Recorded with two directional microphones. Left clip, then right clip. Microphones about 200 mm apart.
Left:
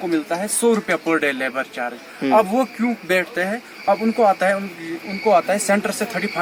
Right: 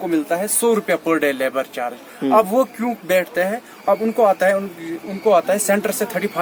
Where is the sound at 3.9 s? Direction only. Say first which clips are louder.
Right 1 dB; 15° right (ahead or behind).